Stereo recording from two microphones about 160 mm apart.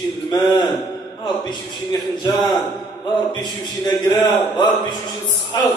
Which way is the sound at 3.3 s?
25° left (ahead or behind).